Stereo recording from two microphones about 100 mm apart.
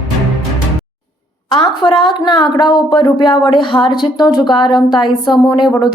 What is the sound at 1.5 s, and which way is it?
A woman's voice, 50° left (ahead or behind).